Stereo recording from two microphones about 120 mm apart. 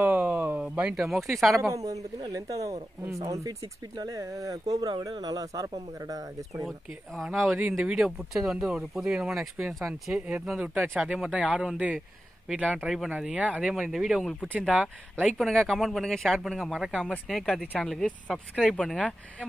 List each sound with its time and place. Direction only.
0.0 s a sound: 15° right (ahead or behind)
0.7 s speech: 5° right (ahead or behind)
1.5 s speech: 25° right (ahead or behind)
7.5 s speech: 15° right (ahead or behind)
15.3 s speech: 5° left (ahead or behind)